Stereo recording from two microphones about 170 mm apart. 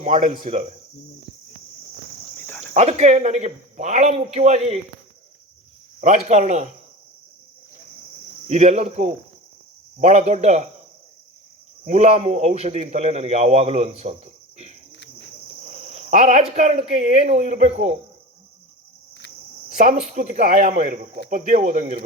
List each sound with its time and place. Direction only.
0.0 s a man's voice: 40° right (ahead or behind)
2.5 s cricket: 10° left (ahead or behind)
2.7 s a man's voice: 40° right (ahead or behind)
6.0 s speech: 40° right (ahead or behind)
8.4 s a man's voice: 45° right (ahead or behind)
11.9 s a man's voice: 40° right (ahead or behind)
15.7 s speech: 45° right (ahead or behind)
19.8 s speech: 50° right (ahead or behind)